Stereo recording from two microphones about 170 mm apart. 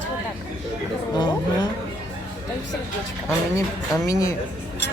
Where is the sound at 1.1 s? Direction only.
25° left (ahead or behind).